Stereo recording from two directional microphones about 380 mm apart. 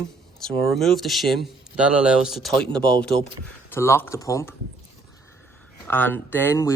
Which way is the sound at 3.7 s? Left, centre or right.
Centre.